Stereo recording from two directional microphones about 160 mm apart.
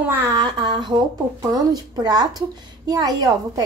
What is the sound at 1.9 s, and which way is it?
A woman's voice, 25° right (ahead or behind).